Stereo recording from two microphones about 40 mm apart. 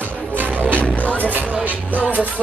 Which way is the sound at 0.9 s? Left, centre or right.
Left.